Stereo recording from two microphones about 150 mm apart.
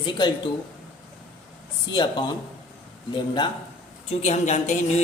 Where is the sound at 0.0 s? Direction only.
30° left (ahead or behind).